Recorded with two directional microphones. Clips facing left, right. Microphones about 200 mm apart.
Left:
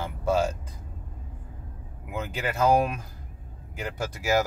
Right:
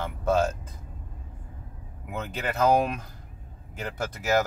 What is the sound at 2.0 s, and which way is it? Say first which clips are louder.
Speech: left 1 dB; 10° left (ahead or behind).